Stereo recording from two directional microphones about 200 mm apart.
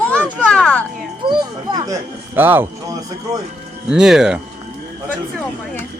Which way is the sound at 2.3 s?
10° right (ahead or behind).